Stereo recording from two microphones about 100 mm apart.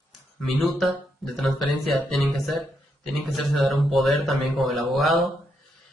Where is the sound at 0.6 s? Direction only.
Centre (ahead or behind).